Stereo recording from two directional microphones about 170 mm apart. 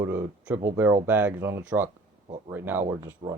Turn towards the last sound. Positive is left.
turn(degrees=-15)  # may be behind; listen again after turning